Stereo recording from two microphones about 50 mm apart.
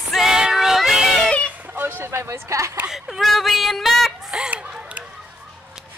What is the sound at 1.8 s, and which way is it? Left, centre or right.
Speech, right.